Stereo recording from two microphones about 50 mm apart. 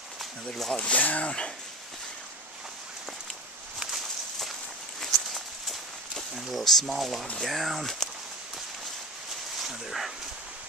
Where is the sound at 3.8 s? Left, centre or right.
Centre.